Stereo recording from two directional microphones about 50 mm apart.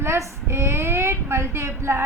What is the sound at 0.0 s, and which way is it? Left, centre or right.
A woman's voice, right.